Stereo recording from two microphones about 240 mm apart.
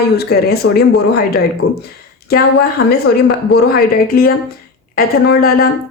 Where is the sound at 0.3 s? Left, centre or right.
Left.